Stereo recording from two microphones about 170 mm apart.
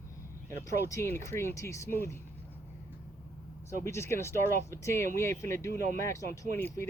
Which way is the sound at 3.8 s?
15° left (ahead or behind).